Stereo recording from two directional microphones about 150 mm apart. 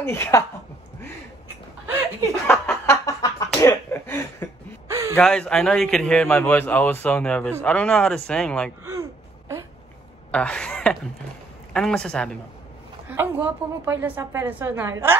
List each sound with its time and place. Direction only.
0.0 s a man's voice: 15° left (ahead or behind)
2.4 s a sound: 15° left (ahead or behind)
4.8 s a sound: 20° right (ahead or behind)
5.1 s a man's voice: 5° left (ahead or behind)
10.3 s a man's voice: 5° left (ahead or behind)
13.1 s a woman's voice: 15° right (ahead or behind)